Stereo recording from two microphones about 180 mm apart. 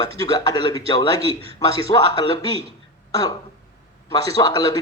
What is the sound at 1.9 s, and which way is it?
Speech, 35° left (ahead or behind).